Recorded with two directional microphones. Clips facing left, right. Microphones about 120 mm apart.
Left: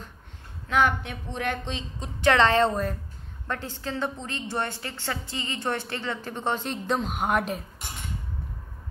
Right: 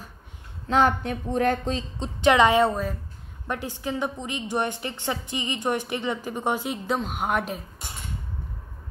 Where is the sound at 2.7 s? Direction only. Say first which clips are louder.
Even; centre (ahead or behind).